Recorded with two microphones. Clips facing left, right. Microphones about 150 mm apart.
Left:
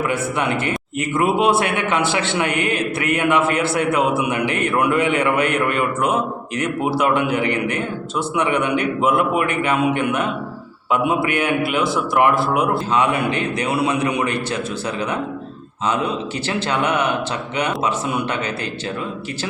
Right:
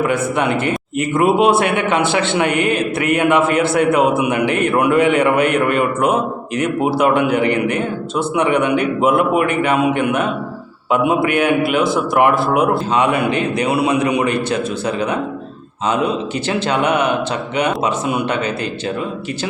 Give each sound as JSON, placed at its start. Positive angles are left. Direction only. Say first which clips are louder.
{"t": 0.0, "sound": "a man's voice", "louder": "right 4 dB", "side_deg": -20}
{"t": 15.9, "sound": "a man's voice", "louder": "right 4 dB", "side_deg": -20}